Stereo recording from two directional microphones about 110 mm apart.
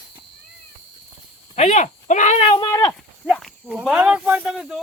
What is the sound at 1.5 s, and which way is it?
Speech, 90° left.